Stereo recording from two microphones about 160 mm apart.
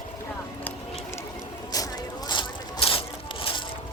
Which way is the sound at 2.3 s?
30° left (ahead or behind).